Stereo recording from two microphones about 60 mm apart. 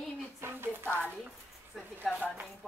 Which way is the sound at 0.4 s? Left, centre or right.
Right.